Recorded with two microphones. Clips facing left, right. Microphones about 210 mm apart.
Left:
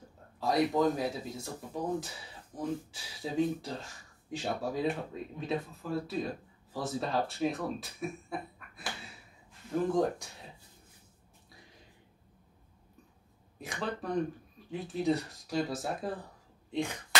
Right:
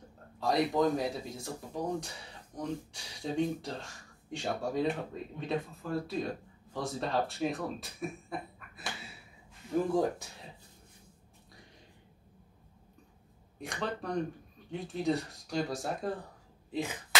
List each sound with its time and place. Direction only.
0.4 s speech: centre (ahead or behind)
9.9 s speech: centre (ahead or behind)
13.6 s speech: centre (ahead or behind)